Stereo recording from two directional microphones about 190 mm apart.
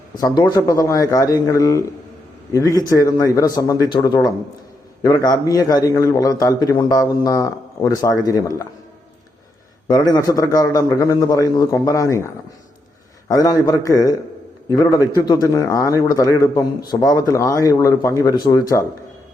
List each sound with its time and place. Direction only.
0.2 s a man's voice: 20° left (ahead or behind)
9.9 s a man's voice: 20° left (ahead or behind)
13.2 s a man's voice: 20° left (ahead or behind)